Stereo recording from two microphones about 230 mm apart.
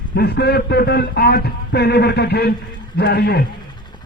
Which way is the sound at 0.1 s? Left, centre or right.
Left.